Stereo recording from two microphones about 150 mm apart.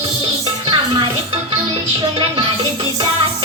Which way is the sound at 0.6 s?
35° right (ahead or behind).